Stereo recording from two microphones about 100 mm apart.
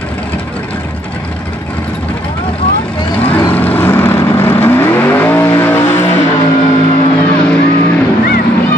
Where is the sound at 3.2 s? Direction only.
15° left (ahead or behind).